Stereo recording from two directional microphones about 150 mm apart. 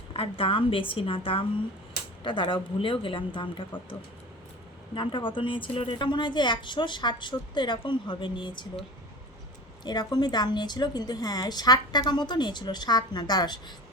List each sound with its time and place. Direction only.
0.1 s a woman's voice: 35° left (ahead or behind)
4.9 s a woman's voice: 35° left (ahead or behind)
9.8 s a woman's voice: 30° left (ahead or behind)